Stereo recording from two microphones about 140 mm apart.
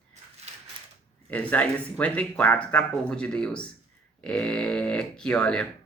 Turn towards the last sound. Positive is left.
turn(degrees=5)  # may be behind; listen again after turning